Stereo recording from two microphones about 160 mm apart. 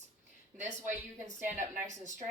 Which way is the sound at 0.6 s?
50° right (ahead or behind).